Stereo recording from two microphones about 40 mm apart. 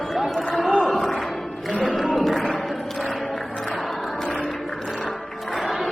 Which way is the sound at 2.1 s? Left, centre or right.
Centre.